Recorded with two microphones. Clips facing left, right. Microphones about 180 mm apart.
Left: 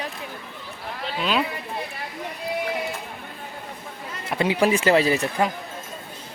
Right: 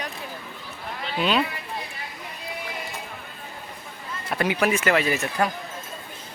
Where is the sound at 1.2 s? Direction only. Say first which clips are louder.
Right 1 dB; 5° left (ahead or behind).